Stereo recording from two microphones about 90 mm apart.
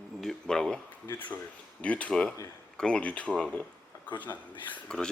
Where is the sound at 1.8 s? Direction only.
15° left (ahead or behind).